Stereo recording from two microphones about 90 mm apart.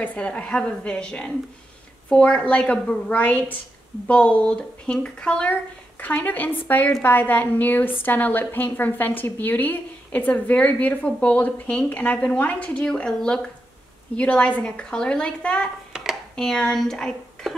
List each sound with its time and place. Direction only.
0.0 s a woman's voice: 15° left (ahead or behind)
15.9 s speech: centre (ahead or behind)